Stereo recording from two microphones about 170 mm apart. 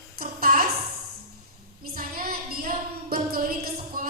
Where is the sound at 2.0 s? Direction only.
60° right (ahead or behind).